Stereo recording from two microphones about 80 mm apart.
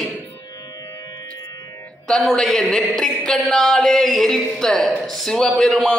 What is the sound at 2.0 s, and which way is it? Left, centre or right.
Speech, centre.